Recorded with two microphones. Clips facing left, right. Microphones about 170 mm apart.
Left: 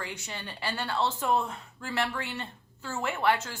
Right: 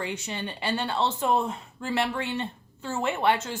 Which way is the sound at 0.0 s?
20° right (ahead or behind).